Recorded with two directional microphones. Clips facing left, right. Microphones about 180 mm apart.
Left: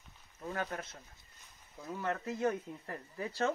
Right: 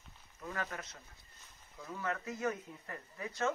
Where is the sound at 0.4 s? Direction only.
30° left (ahead or behind).